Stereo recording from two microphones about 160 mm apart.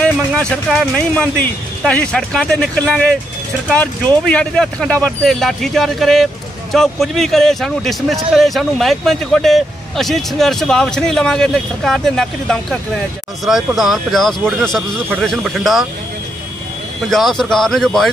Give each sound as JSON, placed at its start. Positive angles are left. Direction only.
{"t": 0.0, "sound": "speech", "side_deg": 5}
{"t": 17.1, "sound": "speech", "side_deg": 5}